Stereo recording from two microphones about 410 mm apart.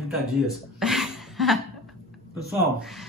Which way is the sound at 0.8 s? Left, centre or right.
Centre.